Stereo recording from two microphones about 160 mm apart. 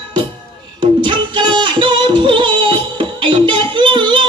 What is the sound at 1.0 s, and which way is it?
Music, 30° right (ahead or behind).